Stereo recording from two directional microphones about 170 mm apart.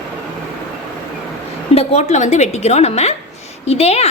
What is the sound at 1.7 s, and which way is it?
A woman's voice, 40° left (ahead or behind).